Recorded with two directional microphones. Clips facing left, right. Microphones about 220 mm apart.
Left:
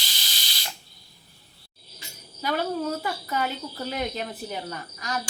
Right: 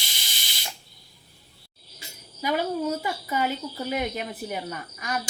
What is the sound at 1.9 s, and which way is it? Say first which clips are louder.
Speech: right 2 dB; 10° right (ahead or behind).